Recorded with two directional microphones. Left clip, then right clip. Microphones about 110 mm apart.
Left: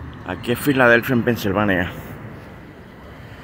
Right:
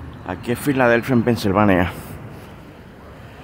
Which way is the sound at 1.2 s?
50° right (ahead or behind).